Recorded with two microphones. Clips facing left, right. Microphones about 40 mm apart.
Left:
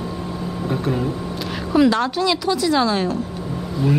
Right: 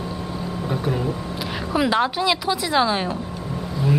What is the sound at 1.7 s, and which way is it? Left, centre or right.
A woman's voice, centre.